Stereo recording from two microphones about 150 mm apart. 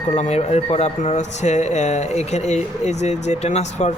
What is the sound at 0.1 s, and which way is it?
Speech, 50° left (ahead or behind).